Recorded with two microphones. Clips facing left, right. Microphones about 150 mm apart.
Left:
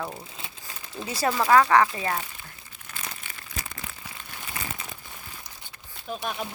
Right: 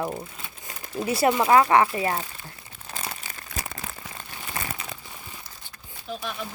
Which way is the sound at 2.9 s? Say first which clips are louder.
Right 4 dB; 35° right (ahead or behind).